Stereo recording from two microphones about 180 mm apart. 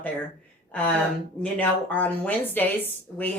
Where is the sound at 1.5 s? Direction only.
10° left (ahead or behind).